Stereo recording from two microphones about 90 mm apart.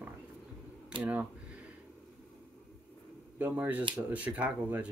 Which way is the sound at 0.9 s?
70° right (ahead or behind).